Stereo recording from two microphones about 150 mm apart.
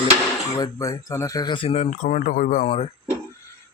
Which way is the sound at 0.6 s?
20° left (ahead or behind).